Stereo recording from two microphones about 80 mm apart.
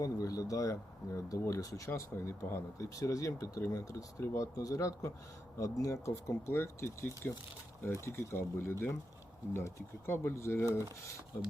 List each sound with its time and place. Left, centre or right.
0.0 s speech: left